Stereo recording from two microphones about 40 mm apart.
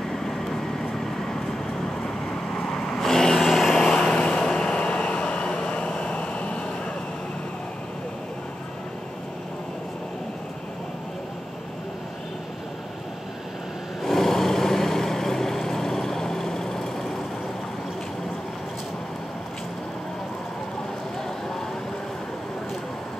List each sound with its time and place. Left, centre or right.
2.9 s vehicle: centre
3.7 s vehicle: left
14.0 s vehicle: centre